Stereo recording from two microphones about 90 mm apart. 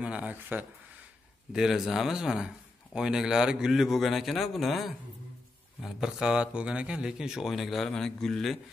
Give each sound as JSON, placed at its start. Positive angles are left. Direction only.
{"t": 0.0, "sound": "speech", "side_deg": -15}
{"t": 1.5, "sound": "speech", "side_deg": -5}